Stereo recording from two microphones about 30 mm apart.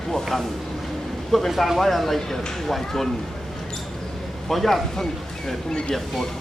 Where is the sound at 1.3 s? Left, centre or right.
Centre.